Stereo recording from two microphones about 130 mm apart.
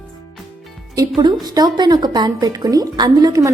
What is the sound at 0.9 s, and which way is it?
A woman's voice, 35° right (ahead or behind).